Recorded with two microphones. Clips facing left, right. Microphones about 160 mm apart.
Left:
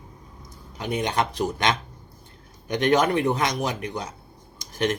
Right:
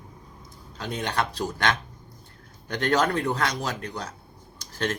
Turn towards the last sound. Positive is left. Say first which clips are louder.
# left 4 dB
turn(degrees=15)  # may be behind; listen again after turning